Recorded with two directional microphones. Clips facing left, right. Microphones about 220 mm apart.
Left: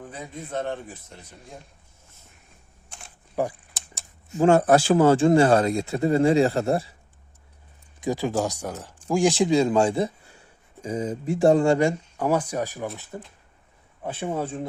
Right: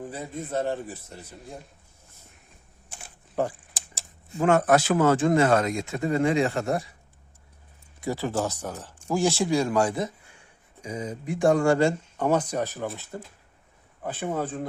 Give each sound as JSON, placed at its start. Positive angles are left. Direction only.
{"t": 0.0, "sound": "a man's voice", "side_deg": -5}
{"t": 2.9, "sound": "camera", "side_deg": -5}
{"t": 3.4, "sound": "speech", "side_deg": 10}
{"t": 4.4, "sound": "speech", "side_deg": 30}
{"t": 8.0, "sound": "speech", "side_deg": 15}
{"t": 12.1, "sound": "speech", "side_deg": 5}